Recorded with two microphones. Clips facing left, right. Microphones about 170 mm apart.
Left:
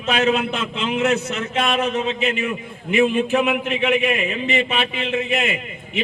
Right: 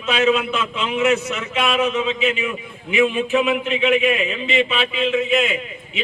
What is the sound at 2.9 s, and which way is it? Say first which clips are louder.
Speech: even; 45° left (ahead or behind).